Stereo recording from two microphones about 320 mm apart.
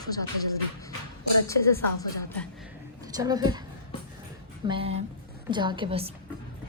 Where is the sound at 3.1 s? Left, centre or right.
Centre.